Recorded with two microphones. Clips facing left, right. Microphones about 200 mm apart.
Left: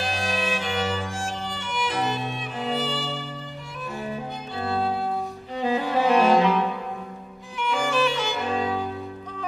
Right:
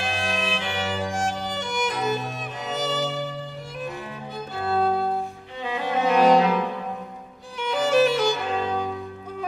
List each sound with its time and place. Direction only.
0.0 s music: 40° left (ahead or behind)
1.1 s violin: 40° right (ahead or behind)
4.6 s music: 45° right (ahead or behind)
5.6 s cello: 35° left (ahead or behind)
7.6 s music: 40° right (ahead or behind)